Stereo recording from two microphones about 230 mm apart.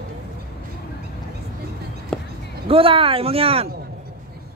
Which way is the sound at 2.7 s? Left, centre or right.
Right.